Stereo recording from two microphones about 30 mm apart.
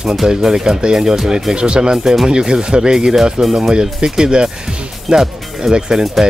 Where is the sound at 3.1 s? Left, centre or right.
Centre.